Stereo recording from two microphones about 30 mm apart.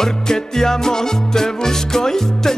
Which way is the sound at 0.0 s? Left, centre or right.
Centre.